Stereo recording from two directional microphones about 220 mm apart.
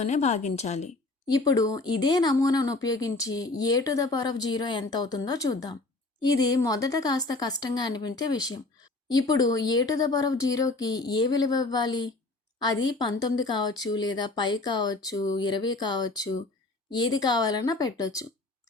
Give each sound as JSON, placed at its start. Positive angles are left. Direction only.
{"t": 0.0, "sound": "a woman's voice", "side_deg": 30}
{"t": 1.3, "sound": "speech", "side_deg": 15}